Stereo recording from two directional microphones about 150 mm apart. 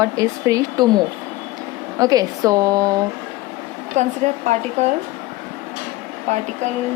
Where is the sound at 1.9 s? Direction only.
25° right (ahead or behind).